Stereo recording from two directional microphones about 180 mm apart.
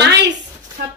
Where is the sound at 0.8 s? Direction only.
60° right (ahead or behind).